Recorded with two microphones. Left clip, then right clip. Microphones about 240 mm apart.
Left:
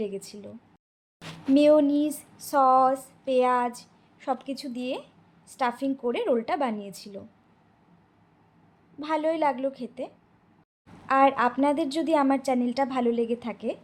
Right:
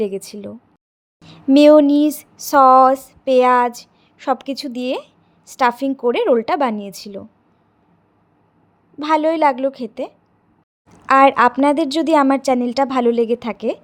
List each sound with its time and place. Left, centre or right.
0.0 s a woman's voice: right
1.5 s a woman's voice: right
9.0 s a woman's voice: right